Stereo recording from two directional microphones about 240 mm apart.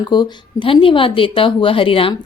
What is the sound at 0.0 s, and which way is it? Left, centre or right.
A woman's voice, centre.